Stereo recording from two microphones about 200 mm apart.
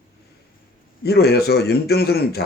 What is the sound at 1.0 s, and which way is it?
Speech, 50° left (ahead or behind).